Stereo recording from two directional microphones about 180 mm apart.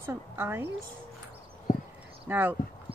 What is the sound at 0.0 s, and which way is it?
Speech, 15° right (ahead or behind).